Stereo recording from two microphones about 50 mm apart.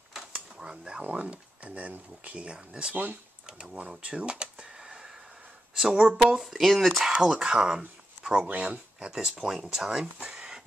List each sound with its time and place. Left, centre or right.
0.6 s speech: centre
2.9 s speech: right
3.4 s speech: centre
6.1 s speech: centre
7.0 s speech: centre
8.2 s a sound: centre
8.5 s speech: right
9.5 s speech: centre